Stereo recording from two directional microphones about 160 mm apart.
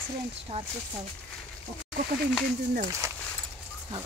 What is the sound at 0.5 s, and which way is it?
Speech, 45° right (ahead or behind).